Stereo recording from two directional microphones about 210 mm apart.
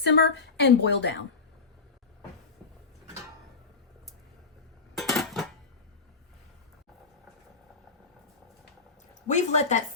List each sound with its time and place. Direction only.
0.0 s a woman's voice: 55° left (ahead or behind)
4.9 s dishes: centre (ahead or behind)
9.2 s a woman's voice: 35° left (ahead or behind)